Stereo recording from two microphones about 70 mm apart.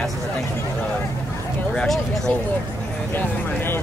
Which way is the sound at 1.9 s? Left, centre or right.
Centre.